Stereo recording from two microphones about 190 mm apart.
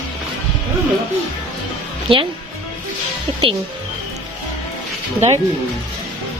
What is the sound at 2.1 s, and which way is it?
Speech, 30° right (ahead or behind).